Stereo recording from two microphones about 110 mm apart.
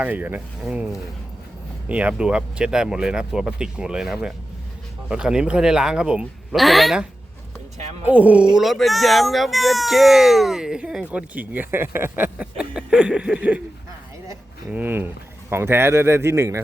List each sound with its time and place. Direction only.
0.0 s speech: 15° right (ahead or behind)
1.9 s speech: 10° right (ahead or behind)
8.0 s speech: 15° right (ahead or behind)
8.5 s speech: centre (ahead or behind)
14.7 s speech: 15° right (ahead or behind)